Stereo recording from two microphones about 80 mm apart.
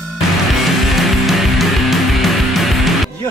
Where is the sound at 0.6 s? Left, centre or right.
Centre.